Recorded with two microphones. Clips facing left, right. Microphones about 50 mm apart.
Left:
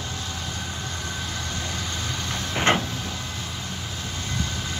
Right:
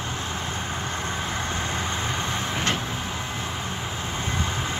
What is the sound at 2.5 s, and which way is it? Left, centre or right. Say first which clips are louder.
Vehicle: left 8 dB; left.